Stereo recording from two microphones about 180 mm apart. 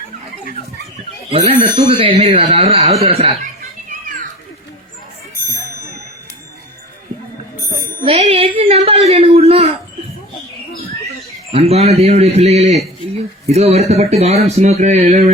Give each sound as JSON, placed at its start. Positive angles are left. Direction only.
{"t": 1.3, "sound": "speech", "side_deg": -35}
{"t": 8.0, "sound": "speech", "side_deg": -30}
{"t": 11.5, "sound": "speech", "side_deg": -35}